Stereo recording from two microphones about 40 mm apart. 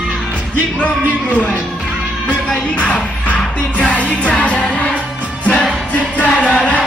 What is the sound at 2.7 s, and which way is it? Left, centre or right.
Music, left.